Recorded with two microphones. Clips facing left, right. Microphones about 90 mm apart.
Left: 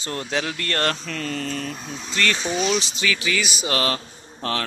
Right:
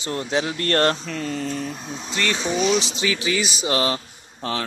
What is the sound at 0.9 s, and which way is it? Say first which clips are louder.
Speech: right 1 dB; 15° right (ahead or behind).